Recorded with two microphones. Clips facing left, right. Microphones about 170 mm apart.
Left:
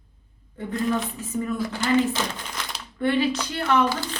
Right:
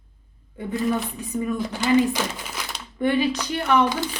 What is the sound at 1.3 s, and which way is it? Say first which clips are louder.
A woman's voice: right 1 dB; 15° right (ahead or behind).